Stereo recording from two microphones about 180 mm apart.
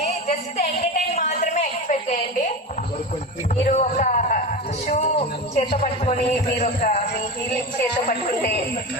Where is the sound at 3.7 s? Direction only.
45° left (ahead or behind).